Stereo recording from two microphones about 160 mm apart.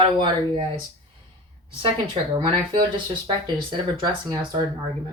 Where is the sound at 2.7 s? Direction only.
30° right (ahead or behind).